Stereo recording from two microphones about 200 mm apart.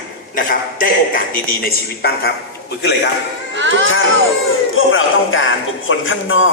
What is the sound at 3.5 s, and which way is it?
Speech, 65° right (ahead or behind).